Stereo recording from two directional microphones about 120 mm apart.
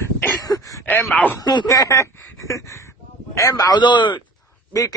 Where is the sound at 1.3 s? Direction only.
35° left (ahead or behind).